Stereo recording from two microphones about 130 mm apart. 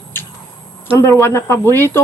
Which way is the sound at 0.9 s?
20° left (ahead or behind).